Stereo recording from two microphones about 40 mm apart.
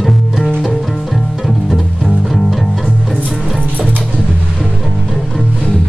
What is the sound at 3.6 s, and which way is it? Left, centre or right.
Music, left.